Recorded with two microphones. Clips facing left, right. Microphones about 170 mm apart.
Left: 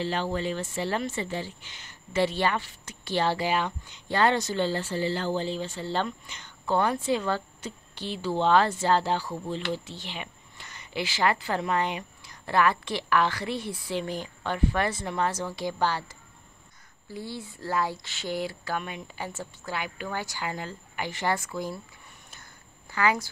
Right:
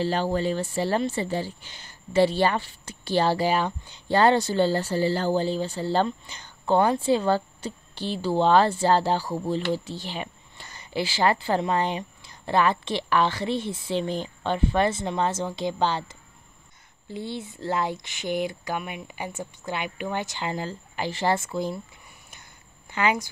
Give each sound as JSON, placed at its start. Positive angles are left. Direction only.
{"t": 0.0, "sound": "speech", "side_deg": -35}
{"t": 22.8, "sound": "speech", "side_deg": -20}